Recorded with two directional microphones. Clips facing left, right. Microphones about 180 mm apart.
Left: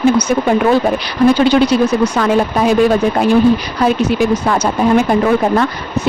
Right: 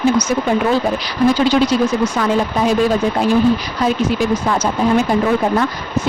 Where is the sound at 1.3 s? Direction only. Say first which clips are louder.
Left 3 dB; 65° left (ahead or behind).